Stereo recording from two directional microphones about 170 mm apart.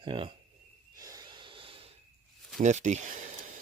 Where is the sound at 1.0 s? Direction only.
20° right (ahead or behind).